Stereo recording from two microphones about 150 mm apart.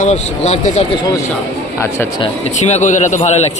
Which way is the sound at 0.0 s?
50° left (ahead or behind).